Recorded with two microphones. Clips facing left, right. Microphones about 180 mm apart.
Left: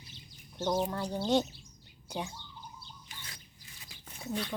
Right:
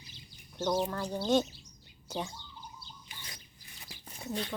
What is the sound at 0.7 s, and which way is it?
Speech, 15° left (ahead or behind).